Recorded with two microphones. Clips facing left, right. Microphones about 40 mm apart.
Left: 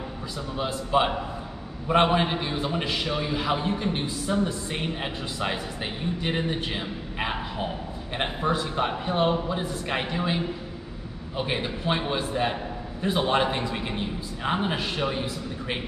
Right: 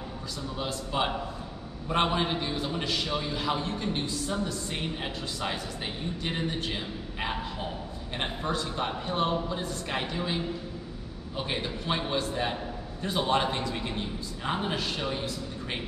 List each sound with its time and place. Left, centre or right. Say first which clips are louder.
0.6 s a man's voice: left 7 dB; centre